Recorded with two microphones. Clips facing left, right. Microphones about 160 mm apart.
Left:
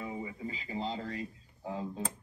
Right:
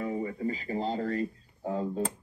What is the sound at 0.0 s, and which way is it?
Music, 55° right (ahead or behind).